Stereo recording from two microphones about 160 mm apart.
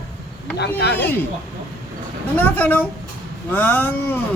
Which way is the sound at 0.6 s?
90° left.